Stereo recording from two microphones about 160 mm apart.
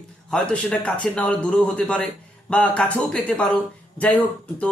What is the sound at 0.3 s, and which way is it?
Speech, 5° left (ahead or behind).